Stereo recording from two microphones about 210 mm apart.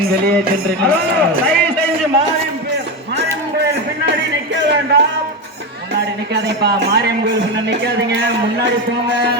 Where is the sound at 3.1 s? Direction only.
55° right (ahead or behind).